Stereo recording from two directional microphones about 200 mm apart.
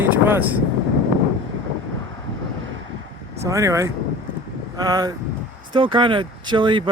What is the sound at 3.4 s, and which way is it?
Speech, 15° right (ahead or behind).